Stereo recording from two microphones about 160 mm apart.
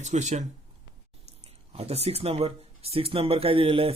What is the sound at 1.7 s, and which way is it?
Speech, 40° right (ahead or behind).